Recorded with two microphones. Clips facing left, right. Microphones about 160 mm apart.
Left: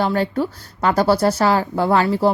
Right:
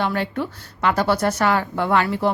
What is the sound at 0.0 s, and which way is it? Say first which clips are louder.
A woman's voice: left 4 dB; 35° left (ahead or behind).